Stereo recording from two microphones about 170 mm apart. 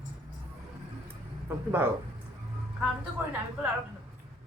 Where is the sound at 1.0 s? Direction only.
15° right (ahead or behind).